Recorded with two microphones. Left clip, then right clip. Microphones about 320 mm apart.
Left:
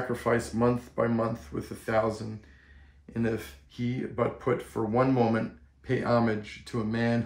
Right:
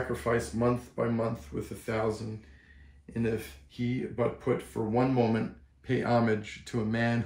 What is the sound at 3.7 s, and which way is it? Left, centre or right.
Speech, centre.